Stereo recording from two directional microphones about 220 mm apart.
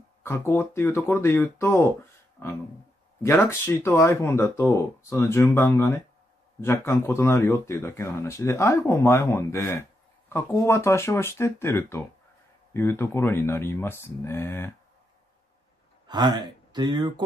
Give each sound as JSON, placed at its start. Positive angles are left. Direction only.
{"t": 0.2, "sound": "speech", "side_deg": 10}
{"t": 16.1, "sound": "speech", "side_deg": -20}